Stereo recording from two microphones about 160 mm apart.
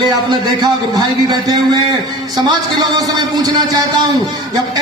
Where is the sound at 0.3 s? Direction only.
25° right (ahead or behind).